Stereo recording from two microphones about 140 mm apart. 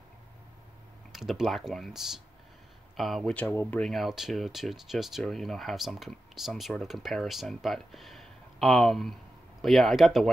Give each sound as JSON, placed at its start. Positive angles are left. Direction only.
{"t": 1.1, "sound": "speech", "side_deg": 0}
{"t": 3.4, "sound": "speech", "side_deg": 20}
{"t": 3.8, "sound": "speech", "side_deg": 0}